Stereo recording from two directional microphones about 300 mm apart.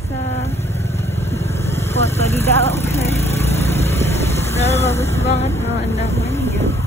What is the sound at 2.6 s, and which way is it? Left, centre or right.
Vehicle, left.